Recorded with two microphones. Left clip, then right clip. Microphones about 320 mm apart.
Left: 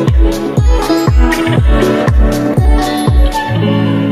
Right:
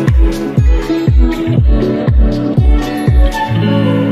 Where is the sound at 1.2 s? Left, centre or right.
Left.